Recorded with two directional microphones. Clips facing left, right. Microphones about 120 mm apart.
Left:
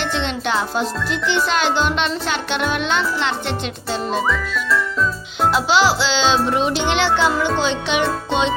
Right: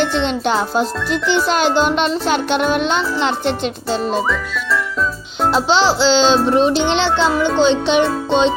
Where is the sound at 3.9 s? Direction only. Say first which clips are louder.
Right 2 dB; centre (ahead or behind).